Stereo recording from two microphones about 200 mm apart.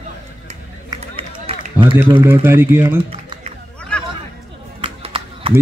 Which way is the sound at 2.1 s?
10° right (ahead or behind).